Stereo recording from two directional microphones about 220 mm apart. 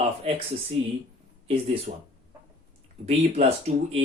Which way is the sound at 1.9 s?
35° right (ahead or behind).